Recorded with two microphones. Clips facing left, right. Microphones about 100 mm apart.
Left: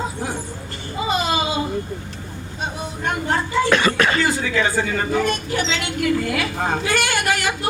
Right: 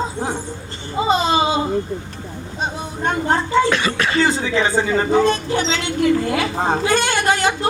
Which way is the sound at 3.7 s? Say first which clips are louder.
Left 3 dB; 50° left (ahead or behind).